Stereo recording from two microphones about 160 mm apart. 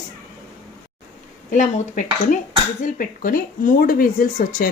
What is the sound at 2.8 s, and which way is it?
Speech, 60° left (ahead or behind).